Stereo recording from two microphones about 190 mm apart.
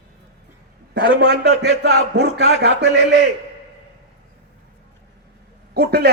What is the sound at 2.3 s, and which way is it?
Speech, 60° right (ahead or behind).